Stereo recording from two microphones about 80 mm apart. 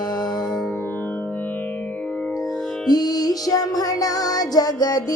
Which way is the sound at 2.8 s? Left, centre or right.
Left.